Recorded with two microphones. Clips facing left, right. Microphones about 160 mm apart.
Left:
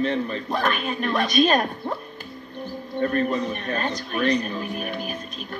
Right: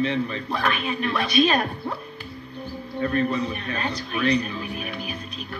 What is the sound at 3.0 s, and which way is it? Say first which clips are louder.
Speech: left 1 dB; 45° left (ahead or behind).